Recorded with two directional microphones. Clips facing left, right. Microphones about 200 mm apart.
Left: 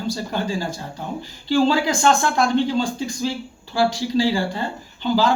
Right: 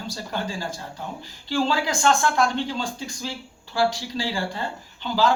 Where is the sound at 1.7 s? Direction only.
20° left (ahead or behind).